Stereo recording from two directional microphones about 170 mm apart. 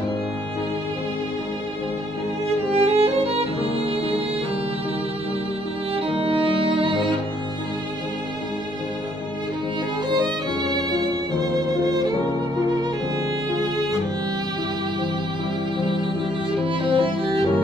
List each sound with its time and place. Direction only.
2.7 s violin: 35° right (ahead or behind)
5.9 s music: 35° right (ahead or behind)
10.1 s violin: 25° right (ahead or behind)
11.4 s music: 25° right (ahead or behind)
16.6 s music: 30° right (ahead or behind)